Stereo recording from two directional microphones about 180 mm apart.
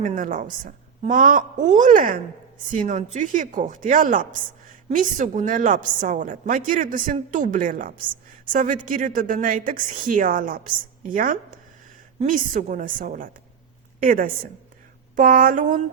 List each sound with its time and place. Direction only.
0.0 s a woman's voice: 45° right (ahead or behind)